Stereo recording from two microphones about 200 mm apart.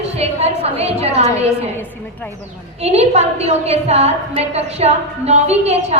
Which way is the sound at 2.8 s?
30° right (ahead or behind).